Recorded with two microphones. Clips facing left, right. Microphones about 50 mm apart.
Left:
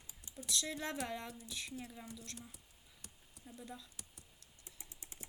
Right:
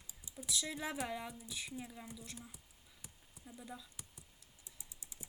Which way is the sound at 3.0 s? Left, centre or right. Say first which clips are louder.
Even; centre.